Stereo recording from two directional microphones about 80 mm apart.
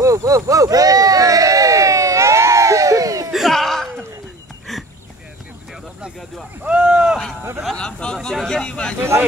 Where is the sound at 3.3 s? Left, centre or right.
Centre.